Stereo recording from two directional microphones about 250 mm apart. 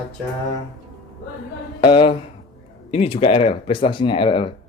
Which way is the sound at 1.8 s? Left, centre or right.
Left.